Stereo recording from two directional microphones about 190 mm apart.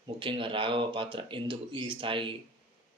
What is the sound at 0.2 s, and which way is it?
Speech, 25° right (ahead or behind).